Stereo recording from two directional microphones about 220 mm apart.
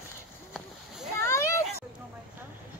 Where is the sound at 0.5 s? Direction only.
Centre (ahead or behind).